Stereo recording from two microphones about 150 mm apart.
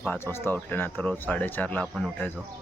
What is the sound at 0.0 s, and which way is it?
Speech, 10° left (ahead or behind).